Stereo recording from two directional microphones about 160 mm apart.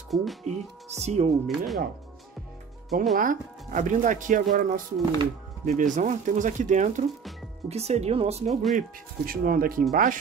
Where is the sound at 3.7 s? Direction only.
50° right (ahead or behind).